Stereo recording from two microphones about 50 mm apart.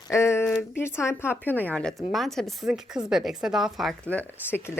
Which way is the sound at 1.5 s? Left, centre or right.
Left.